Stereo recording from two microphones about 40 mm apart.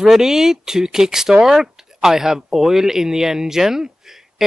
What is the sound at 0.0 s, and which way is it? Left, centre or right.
Speech, centre.